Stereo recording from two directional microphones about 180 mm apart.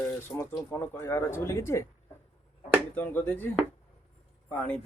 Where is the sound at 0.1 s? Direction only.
15° left (ahead or behind).